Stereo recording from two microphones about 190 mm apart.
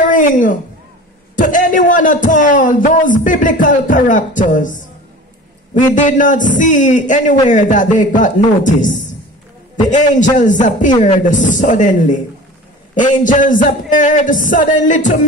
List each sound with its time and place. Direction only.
0.0 s a woman's voice: 45° left (ahead or behind)
9.8 s a man's voice: 40° left (ahead or behind)